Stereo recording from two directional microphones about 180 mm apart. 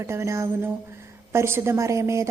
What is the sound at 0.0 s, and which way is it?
Speech, 15° right (ahead or behind).